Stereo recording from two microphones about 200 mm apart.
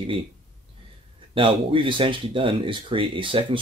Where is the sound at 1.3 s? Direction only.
25° right (ahead or behind).